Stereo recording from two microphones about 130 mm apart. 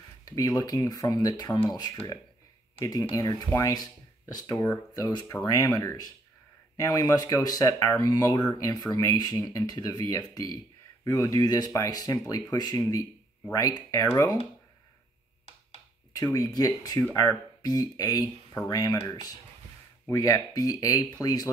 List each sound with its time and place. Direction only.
0.2 s speech: 30° left (ahead or behind)
16.2 s speech: 30° left (ahead or behind)